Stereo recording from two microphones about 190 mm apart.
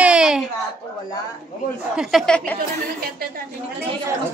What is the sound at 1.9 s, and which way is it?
Speech, centre (ahead or behind).